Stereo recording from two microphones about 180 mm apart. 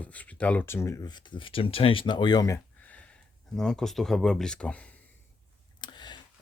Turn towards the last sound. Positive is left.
turn(degrees=25)  # may be behind; listen again after turning